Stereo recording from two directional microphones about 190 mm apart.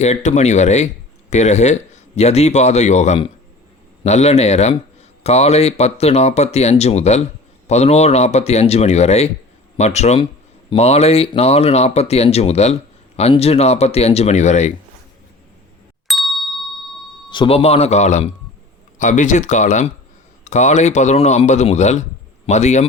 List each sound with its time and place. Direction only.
0.0 s speech: 35° left (ahead or behind)
16.0 s ding: centre (ahead or behind)
17.2 s speech: 25° left (ahead or behind)